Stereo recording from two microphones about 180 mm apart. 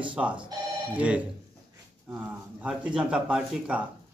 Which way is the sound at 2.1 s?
5° right (ahead or behind).